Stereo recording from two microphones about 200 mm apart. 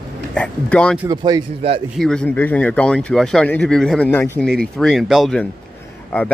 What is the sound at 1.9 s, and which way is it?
Speech, 5° left (ahead or behind).